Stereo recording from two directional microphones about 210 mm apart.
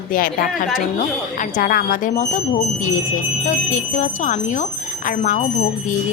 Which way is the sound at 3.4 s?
35° left (ahead or behind).